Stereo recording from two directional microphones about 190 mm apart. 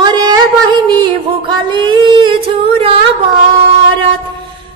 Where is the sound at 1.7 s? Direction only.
25° right (ahead or behind).